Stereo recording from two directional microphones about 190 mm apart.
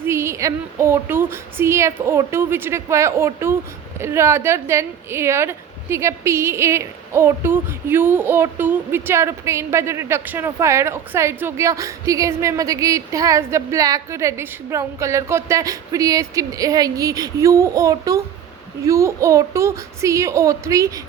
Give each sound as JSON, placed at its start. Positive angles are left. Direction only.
{"t": 0.0, "sound": "a woman's voice", "side_deg": -15}